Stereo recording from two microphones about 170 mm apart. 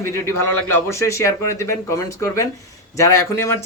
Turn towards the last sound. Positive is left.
turn(degrees=15)  # may be behind; listen again after turning